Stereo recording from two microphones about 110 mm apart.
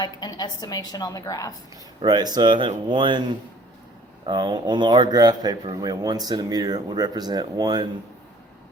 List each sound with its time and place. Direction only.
0.0 s a woman's voice: 40° left (ahead or behind)
2.0 s speech: 40° right (ahead or behind)
4.3 s speech: 45° right (ahead or behind)